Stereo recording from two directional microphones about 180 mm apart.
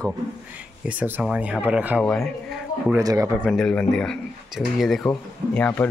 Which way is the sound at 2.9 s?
20° right (ahead or behind).